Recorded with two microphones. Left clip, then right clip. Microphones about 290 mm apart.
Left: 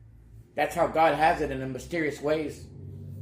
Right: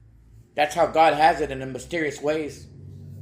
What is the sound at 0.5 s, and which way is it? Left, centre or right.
A man's voice, right.